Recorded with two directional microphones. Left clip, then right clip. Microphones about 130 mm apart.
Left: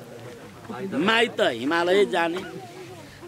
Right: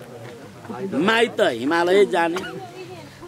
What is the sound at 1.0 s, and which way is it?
Speech, centre (ahead or behind).